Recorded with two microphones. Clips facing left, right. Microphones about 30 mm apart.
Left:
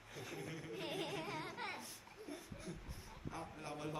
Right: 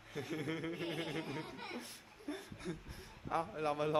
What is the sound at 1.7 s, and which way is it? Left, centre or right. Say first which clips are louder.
A man's voice: right 3 dB; right.